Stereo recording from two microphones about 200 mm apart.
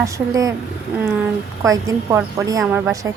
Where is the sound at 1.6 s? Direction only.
15° right (ahead or behind).